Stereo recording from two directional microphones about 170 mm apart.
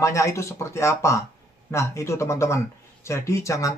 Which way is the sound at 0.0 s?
15° left (ahead or behind).